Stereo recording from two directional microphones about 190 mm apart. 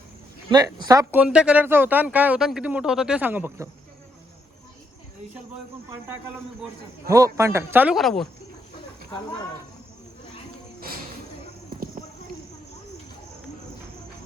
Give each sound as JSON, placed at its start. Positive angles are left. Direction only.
{"t": 0.5, "sound": "speech", "side_deg": -20}
{"t": 1.2, "sound": "speech", "side_deg": -5}
{"t": 7.3, "sound": "speech", "side_deg": -15}